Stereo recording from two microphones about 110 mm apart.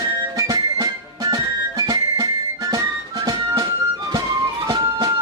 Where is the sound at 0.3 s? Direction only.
35° right (ahead or behind).